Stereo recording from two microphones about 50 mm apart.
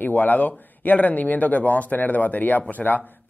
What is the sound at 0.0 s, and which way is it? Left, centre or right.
Speech, left.